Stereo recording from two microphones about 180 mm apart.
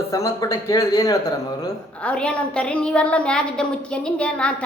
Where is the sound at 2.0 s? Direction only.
5° left (ahead or behind).